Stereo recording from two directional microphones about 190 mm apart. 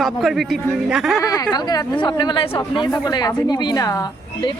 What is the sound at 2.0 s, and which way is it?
A woman's voice, 25° left (ahead or behind).